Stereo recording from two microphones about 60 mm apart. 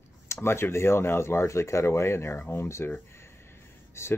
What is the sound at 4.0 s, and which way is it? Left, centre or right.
Speech, left.